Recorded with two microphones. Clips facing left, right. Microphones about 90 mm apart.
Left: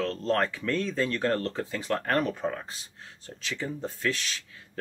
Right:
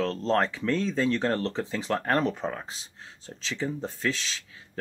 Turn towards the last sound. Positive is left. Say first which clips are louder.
# even
turn(degrees=-30)  # may be behind; listen again after turning